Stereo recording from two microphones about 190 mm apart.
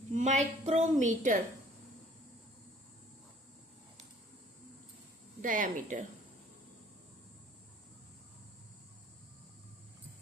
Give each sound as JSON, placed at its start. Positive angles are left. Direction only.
{"t": 0.1, "sound": "a woman's voice", "side_deg": -40}
{"t": 5.4, "sound": "speech", "side_deg": -45}